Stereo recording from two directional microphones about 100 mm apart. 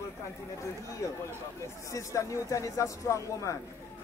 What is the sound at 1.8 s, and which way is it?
A man's voice, 35° left (ahead or behind).